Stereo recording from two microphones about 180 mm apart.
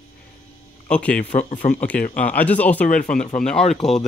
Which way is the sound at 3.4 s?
5° left (ahead or behind).